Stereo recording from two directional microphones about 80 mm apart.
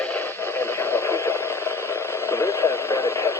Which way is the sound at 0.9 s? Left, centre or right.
Left.